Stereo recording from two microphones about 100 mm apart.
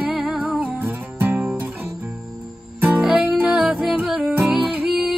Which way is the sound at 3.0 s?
10° right (ahead or behind).